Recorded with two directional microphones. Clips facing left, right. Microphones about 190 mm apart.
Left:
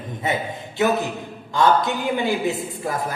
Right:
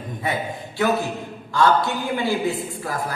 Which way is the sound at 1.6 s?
20° left (ahead or behind).